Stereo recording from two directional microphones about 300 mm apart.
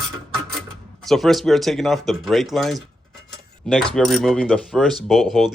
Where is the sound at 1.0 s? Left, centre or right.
Centre.